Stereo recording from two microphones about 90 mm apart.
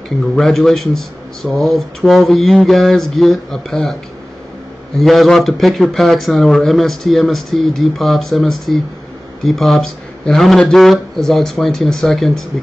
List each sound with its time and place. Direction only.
0.4 s speech: 5° left (ahead or behind)
4.9 s speech: centre (ahead or behind)